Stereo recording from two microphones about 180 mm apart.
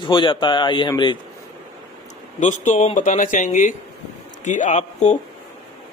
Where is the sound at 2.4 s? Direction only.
45° left (ahead or behind).